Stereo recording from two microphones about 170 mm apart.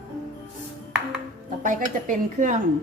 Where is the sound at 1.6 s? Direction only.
50° right (ahead or behind).